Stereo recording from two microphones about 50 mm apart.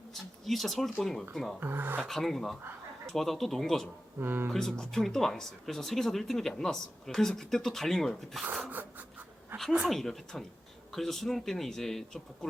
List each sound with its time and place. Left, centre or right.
0.1 s speech: centre
1.5 s speech: right
2.0 s speech: centre
4.2 s speech: right
4.5 s speech: centre
8.7 s pant: right
9.8 s speech: centre